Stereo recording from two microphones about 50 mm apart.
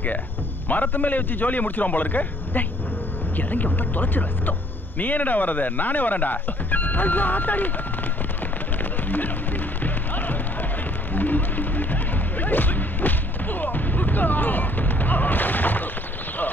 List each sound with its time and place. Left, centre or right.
0.7 s speech: left
9.1 s music: left